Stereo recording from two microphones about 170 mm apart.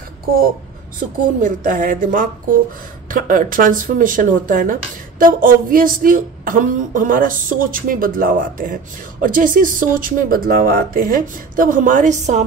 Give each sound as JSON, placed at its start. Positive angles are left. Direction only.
{"t": 1.4, "sound": "a woman's voice", "side_deg": -50}